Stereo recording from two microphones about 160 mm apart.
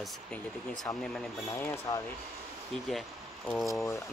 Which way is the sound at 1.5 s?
15° left (ahead or behind).